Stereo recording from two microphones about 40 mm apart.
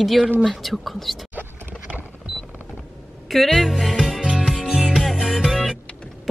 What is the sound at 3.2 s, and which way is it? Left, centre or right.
Speech, centre.